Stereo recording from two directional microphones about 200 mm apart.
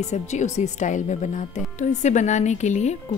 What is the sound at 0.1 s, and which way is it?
Speech, 35° left (ahead or behind).